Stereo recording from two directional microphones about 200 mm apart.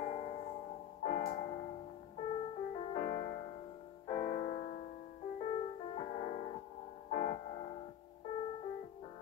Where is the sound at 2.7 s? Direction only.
35° left (ahead or behind).